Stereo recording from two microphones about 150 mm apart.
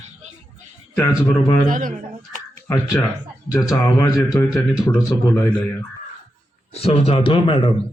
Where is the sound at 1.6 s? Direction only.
60° right (ahead or behind).